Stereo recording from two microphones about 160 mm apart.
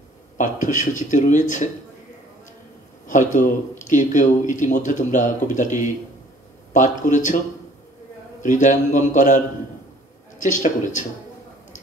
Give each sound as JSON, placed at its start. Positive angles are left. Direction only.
{"t": 0.4, "sound": "speech", "side_deg": 50}
{"t": 3.1, "sound": "speech", "side_deg": 50}
{"t": 8.4, "sound": "speech", "side_deg": 50}
{"t": 10.4, "sound": "speech", "side_deg": 50}